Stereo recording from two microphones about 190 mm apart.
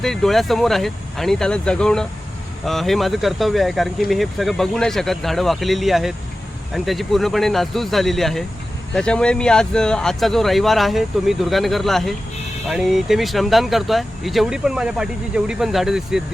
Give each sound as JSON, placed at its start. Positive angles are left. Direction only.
{"t": 0.0, "sound": "speech", "side_deg": 0}